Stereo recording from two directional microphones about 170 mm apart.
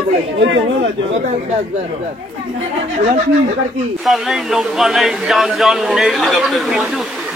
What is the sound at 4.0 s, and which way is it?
Speech, centre (ahead or behind).